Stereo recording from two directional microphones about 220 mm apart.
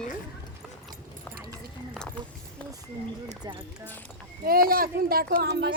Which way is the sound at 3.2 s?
20° right (ahead or behind).